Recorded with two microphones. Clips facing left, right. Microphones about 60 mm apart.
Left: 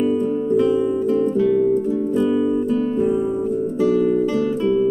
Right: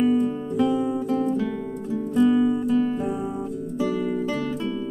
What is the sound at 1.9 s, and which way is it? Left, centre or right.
Music, centre.